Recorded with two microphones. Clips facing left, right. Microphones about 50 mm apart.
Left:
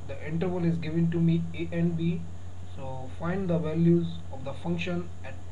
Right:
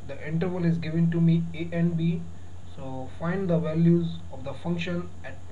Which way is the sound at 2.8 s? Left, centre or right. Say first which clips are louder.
Right 1 dB; centre.